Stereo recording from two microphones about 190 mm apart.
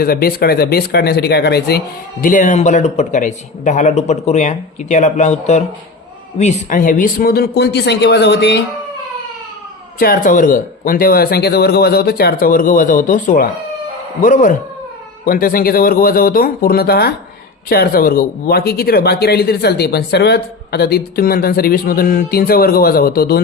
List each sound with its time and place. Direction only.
0.0 s speech: 50° left (ahead or behind)
2.2 s speech: 45° left (ahead or behind); by 8.6 s 60° left (ahead or behind)
10.0 s speech: 50° left (ahead or behind)